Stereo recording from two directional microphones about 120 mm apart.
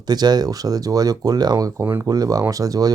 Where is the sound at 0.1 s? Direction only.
35° right (ahead or behind).